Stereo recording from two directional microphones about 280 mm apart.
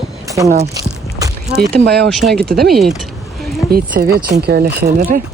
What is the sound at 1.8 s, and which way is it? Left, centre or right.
Speech, right.